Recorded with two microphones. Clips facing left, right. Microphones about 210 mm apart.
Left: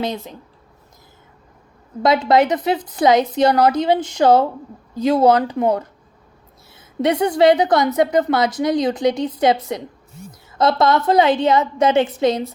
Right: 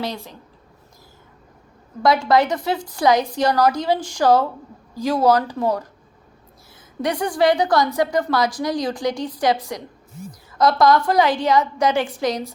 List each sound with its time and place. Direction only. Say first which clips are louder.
0.0 s a woman's voice: left 4 dB; 20° left (ahead or behind)
2.0 s a woman's voice: left 2 dB; 20° left (ahead or behind)
7.0 s a woman's voice: left 5 dB; 25° left (ahead or behind)